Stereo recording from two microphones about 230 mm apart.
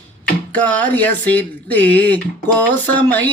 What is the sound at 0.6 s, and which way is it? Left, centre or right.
Music, centre.